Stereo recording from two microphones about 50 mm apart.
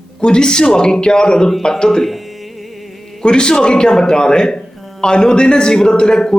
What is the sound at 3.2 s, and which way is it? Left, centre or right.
Speech, centre.